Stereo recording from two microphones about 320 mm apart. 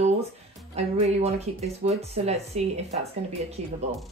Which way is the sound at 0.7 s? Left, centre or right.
Centre.